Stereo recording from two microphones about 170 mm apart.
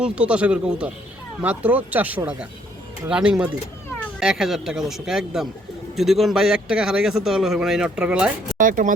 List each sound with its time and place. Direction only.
0.0 s a man's voice: 5° right (ahead or behind)
8.5 s speech: 50° right (ahead or behind)